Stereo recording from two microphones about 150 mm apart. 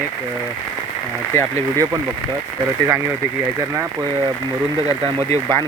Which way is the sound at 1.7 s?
20° right (ahead or behind).